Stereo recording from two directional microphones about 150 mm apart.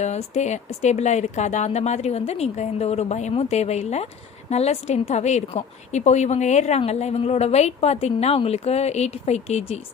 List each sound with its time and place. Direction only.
0.0 s speech: 50° left (ahead or behind)